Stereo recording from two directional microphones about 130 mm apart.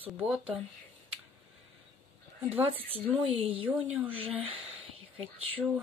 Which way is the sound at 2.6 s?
45° right (ahead or behind).